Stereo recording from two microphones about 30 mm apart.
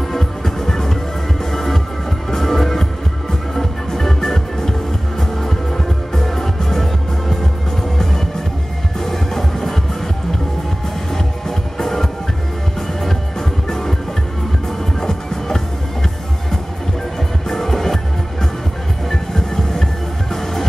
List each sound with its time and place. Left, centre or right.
0.1 s music: centre
9.0 s music: centre
11.1 s music: centre
13.7 s music: centre
15.0 s music: centre
17.5 s music: centre
19.0 s music: centre